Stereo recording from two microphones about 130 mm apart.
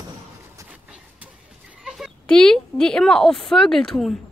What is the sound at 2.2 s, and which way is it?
A woman's voice, 5° left (ahead or behind).